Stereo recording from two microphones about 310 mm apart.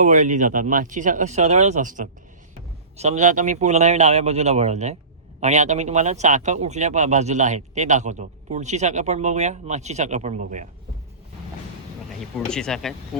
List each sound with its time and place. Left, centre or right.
0.0 s speech: right
12.2 s speech: centre